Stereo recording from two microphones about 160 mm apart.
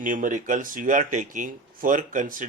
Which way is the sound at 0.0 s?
55° right (ahead or behind).